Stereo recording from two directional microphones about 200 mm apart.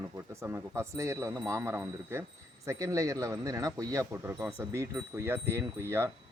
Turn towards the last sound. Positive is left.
turn(degrees=-15)  # may be behind; listen again after turning